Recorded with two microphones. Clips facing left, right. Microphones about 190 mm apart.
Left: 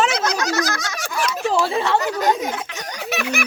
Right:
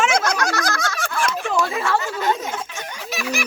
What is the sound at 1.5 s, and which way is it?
Chatter, 30° left (ahead or behind).